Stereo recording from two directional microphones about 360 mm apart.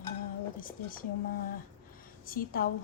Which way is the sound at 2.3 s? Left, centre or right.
Left.